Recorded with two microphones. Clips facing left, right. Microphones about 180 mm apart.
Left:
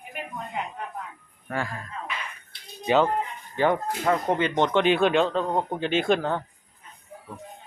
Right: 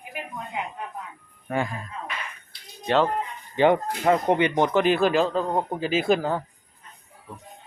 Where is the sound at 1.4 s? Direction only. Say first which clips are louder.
Right 4 dB; 20° right (ahead or behind).